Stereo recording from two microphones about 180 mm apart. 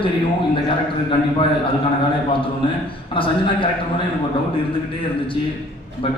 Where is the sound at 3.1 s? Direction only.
30° left (ahead or behind).